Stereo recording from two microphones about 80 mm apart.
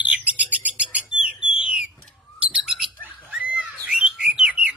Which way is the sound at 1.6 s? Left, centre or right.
Centre.